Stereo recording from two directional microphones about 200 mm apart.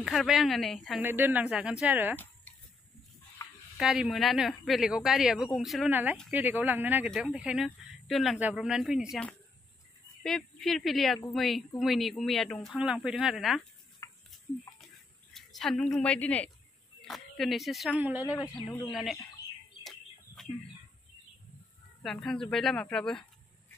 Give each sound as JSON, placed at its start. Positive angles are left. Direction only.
{"t": 0.0, "sound": "speech", "side_deg": 0}
{"t": 1.0, "sound": "speech", "side_deg": -10}
{"t": 3.7, "sound": "speech", "side_deg": 0}
{"t": 10.2, "sound": "speech", "side_deg": 0}
{"t": 14.0, "sound": "stir", "side_deg": 15}
{"t": 15.3, "sound": "a woman's voice", "side_deg": 0}
{"t": 19.8, "sound": "bird", "side_deg": 0}
{"t": 22.0, "sound": "speech", "side_deg": 0}